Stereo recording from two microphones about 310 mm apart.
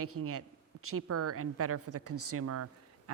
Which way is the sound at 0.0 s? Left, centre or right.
Right.